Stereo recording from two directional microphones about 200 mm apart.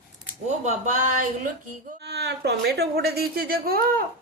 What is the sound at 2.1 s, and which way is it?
A woman's voice, 55° right (ahead or behind).